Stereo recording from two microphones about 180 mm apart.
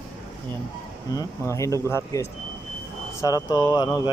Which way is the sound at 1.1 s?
15° left (ahead or behind).